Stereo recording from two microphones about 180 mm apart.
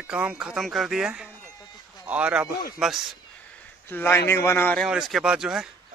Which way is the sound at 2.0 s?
5° right (ahead or behind).